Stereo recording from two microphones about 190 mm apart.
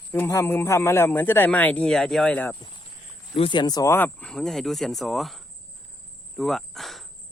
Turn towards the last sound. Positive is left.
turn(degrees=0)  # may be behind; listen again after turning